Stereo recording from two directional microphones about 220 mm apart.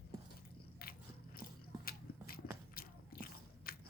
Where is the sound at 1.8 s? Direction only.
45° left (ahead or behind).